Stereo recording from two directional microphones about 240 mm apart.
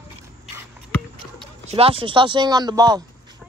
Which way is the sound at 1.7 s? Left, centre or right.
Right.